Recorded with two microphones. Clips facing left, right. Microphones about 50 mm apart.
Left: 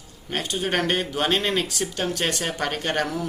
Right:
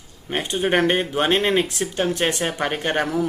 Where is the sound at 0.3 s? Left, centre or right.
Right.